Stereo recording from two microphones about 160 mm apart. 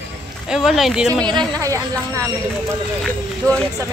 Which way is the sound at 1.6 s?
20° right (ahead or behind).